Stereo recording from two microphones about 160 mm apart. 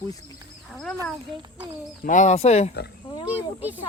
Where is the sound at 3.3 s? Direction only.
10° right (ahead or behind).